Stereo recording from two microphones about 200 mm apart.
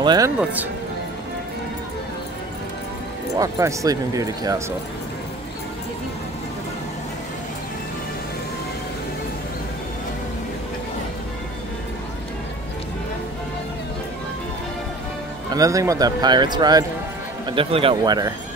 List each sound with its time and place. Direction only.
0.0 s speech: 20° right (ahead or behind)
0.4 s speech: 10° right (ahead or behind)
3.3 s speech: 15° right (ahead or behind)
15.5 s speech: 15° right (ahead or behind)